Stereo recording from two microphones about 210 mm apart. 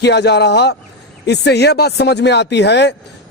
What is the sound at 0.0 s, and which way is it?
A man's voice, 55° left (ahead or behind).